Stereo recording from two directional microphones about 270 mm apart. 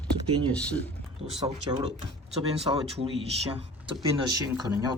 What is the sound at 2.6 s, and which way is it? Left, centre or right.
Speech, centre.